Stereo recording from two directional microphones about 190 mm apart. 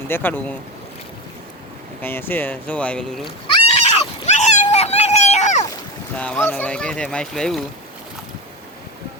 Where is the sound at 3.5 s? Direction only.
30° left (ahead or behind).